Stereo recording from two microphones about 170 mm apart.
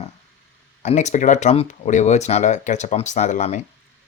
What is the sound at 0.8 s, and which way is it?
Speech, 40° left (ahead or behind).